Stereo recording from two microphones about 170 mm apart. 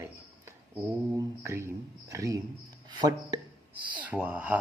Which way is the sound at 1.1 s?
15° right (ahead or behind).